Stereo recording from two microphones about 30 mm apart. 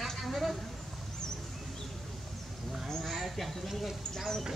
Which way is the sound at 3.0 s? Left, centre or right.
Centre.